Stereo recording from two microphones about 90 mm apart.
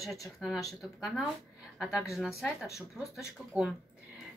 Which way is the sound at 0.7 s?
Centre (ahead or behind).